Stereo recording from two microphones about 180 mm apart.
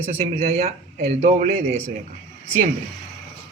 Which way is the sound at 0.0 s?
35° right (ahead or behind).